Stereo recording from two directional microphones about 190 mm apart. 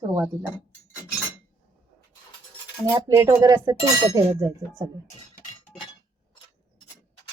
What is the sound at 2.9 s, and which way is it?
A woman's voice, 20° right (ahead or behind).